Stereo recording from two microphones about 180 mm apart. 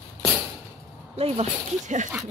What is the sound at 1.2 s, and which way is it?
Speech, 40° right (ahead or behind).